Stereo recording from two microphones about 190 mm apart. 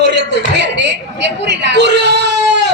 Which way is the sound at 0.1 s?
65° right (ahead or behind).